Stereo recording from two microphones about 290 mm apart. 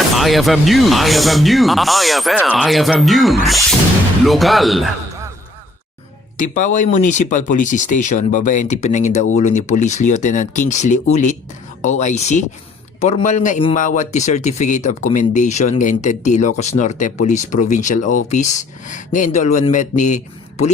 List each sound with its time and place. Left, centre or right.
0.2 s speech: centre
6.3 s a man's voice: left